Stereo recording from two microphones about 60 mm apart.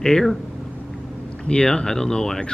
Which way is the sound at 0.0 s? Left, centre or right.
Centre.